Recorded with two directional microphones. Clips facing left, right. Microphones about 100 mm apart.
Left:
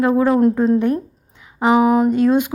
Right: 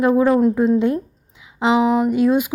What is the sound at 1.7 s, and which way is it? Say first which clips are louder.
Speech: left 2 dB; 50° left (ahead or behind).